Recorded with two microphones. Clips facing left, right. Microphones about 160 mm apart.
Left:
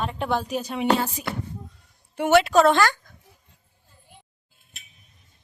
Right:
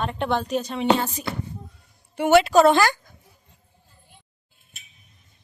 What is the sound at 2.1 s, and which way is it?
Speech, centre (ahead or behind).